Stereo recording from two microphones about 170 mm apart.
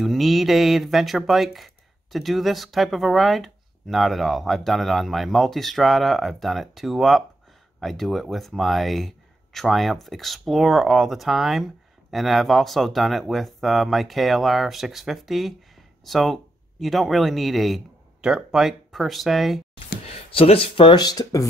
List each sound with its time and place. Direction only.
0.0 s speech: centre (ahead or behind)
20.1 s speech: 35° left (ahead or behind); by 21.5 s 20° left (ahead or behind)